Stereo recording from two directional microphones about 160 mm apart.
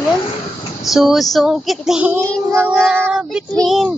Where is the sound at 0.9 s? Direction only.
Centre (ahead or behind).